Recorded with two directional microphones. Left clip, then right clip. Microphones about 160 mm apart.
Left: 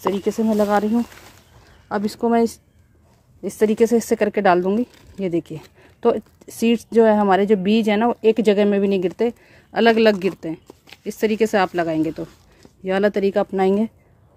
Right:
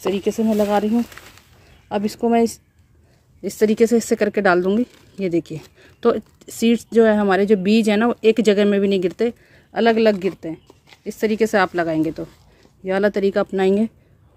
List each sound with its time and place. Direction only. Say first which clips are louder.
0.0 s speech: even; 5° left (ahead or behind)
9.5 s speech: left 2 dB; 15° left (ahead or behind); by 13.9 s centre (ahead or behind)